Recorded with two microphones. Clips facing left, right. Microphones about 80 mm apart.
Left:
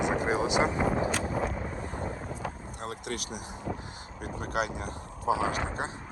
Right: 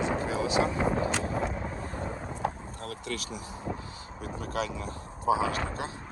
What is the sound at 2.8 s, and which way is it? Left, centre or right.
Speech, left.